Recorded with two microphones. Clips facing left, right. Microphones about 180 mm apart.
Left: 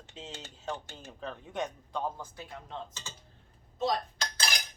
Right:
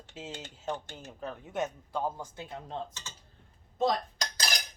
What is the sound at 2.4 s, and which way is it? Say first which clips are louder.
Speech: right 3 dB; 30° right (ahead or behind).